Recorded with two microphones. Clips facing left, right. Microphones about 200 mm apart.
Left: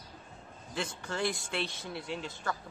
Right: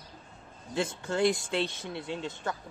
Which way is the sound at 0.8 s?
20° right (ahead or behind).